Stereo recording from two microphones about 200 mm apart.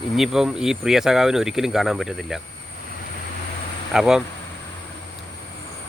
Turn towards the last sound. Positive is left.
turn(degrees=-5)  # may be behind; listen again after turning